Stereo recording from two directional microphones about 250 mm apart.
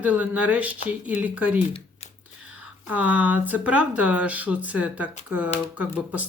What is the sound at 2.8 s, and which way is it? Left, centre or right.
Speech, centre.